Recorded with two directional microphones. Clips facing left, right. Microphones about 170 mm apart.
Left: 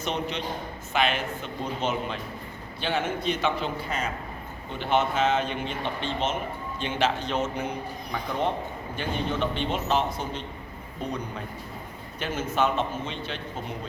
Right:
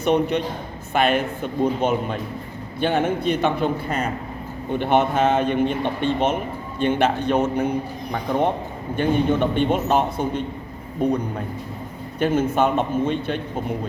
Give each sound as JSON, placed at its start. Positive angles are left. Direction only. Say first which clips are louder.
{"t": 0.0, "sound": "a man's voice", "louder": "right 10 dB", "side_deg": -55}